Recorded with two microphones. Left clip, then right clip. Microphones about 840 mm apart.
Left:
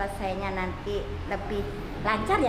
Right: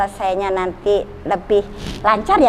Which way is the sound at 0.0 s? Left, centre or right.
Right.